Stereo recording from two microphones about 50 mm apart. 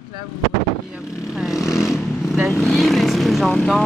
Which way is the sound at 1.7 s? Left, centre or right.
Centre.